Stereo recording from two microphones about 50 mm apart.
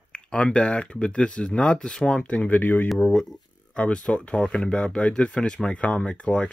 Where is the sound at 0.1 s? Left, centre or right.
Left.